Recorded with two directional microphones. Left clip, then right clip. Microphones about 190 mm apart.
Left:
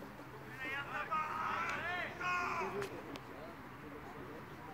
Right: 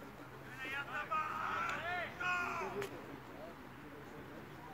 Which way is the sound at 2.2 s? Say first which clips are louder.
Left 1 dB; 35° right (ahead or behind).